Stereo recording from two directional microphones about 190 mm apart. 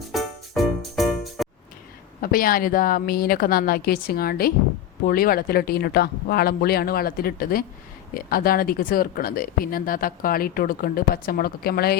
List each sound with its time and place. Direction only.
0.1 s music: centre (ahead or behind)
2.2 s speech: 50° left (ahead or behind)